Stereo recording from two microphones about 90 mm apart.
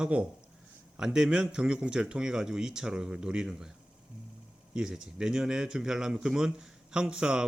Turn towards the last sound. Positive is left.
turn(degrees=-10)  # may be behind; listen again after turning